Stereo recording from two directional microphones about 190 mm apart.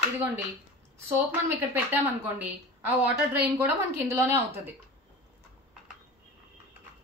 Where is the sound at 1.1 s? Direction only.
10° right (ahead or behind).